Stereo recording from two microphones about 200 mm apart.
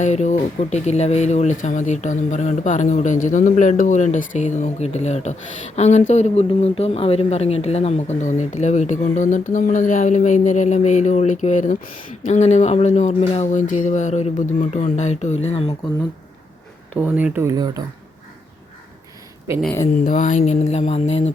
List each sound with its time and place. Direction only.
0.0 s speech: 35° left (ahead or behind)
17.2 s speech: 10° right (ahead or behind)
20.1 s speech: 40° left (ahead or behind)